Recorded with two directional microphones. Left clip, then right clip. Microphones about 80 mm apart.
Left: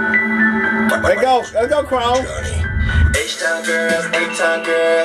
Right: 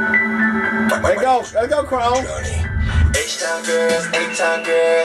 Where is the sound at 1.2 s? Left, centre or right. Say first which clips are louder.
Left 2 dB; left.